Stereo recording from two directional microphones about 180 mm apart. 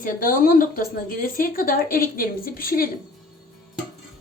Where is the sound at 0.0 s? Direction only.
50° left (ahead or behind).